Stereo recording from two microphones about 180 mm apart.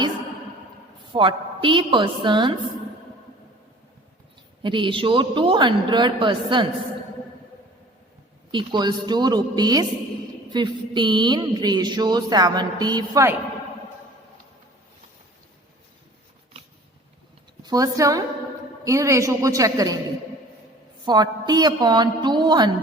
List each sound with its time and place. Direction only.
1.1 s speech: 25° right (ahead or behind)
4.6 s speech: 25° right (ahead or behind)
8.5 s speech: 25° right (ahead or behind)
17.6 s a woman's voice: 20° right (ahead or behind)
21.0 s speech: 20° right (ahead or behind)